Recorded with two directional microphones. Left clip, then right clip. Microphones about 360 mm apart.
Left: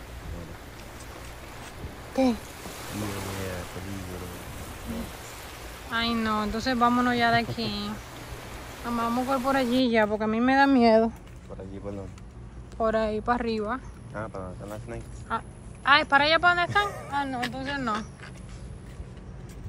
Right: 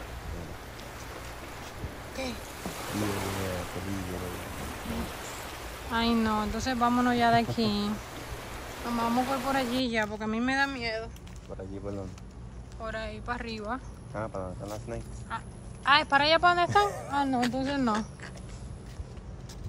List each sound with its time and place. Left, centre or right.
1.8 s a sound: centre
12.8 s speech: centre
14.1 s speech: right
15.2 s a woman's voice: centre